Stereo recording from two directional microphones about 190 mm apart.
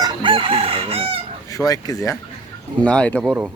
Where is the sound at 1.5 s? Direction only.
20° left (ahead or behind).